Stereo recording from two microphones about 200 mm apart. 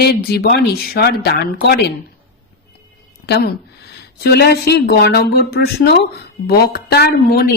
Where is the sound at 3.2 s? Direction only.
55° left (ahead or behind).